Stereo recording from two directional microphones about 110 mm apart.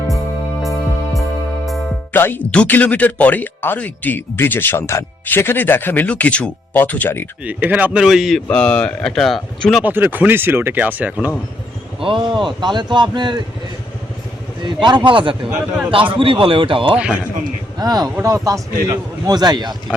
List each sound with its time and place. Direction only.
0.6 s music: centre (ahead or behind)
2.1 s speech: 20° left (ahead or behind)
7.4 s speech: 15° right (ahead or behind)
8.4 s speech: 10° left (ahead or behind)
9.8 s speech: 15° right (ahead or behind)
11.9 s a man's voice: 50° right (ahead or behind)
14.6 s a man's voice: 45° right (ahead or behind)
17.7 s a man's voice: 35° right (ahead or behind)